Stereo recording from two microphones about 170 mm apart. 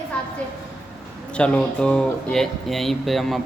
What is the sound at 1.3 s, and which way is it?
Speech, 5° left (ahead or behind).